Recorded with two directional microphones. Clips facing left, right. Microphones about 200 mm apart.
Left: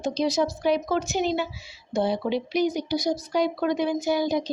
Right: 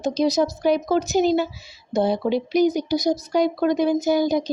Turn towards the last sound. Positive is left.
turn(degrees=-45)  # may be behind; listen again after turning